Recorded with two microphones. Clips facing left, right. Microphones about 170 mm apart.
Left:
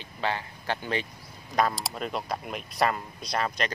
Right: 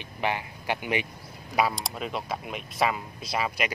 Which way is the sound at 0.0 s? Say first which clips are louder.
Right 1 dB; 15° right (ahead or behind).